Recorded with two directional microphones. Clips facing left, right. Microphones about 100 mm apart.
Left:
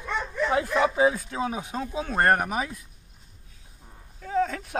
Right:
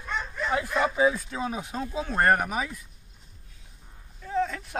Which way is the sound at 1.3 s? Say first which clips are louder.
Left 2 dB; 15° left (ahead or behind).